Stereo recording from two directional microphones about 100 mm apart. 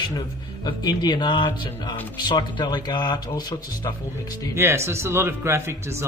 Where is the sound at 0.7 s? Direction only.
45° left (ahead or behind).